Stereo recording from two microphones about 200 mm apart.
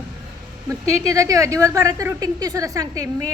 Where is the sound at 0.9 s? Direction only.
15° right (ahead or behind).